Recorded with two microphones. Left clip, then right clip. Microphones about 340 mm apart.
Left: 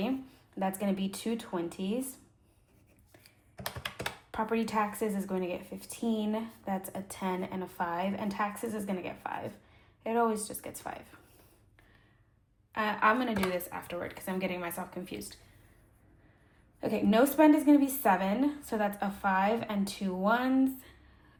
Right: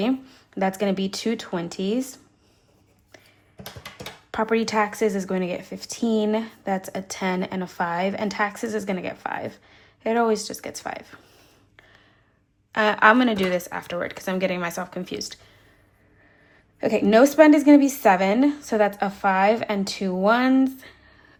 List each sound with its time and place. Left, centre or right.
0.6 s speech: right
4.3 s speech: right
5.7 s speech: right
6.1 s speech: right
12.7 s speech: centre
16.8 s speech: right